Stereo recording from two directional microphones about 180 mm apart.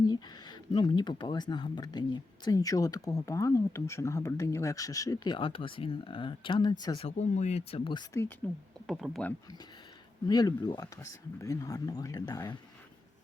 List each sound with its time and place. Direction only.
0.1 s speech: 25° left (ahead or behind)
7.2 s speech: 40° left (ahead or behind)
8.9 s speech: centre (ahead or behind)
10.2 s speech: 20° left (ahead or behind)